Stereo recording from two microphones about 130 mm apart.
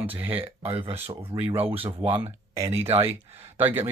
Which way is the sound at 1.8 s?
45° right (ahead or behind).